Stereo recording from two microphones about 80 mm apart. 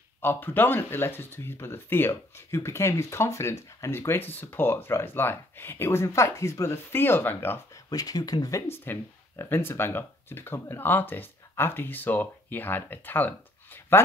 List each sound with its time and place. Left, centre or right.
0.2 s speech: left
7.7 s speech: left
8.6 s speech: left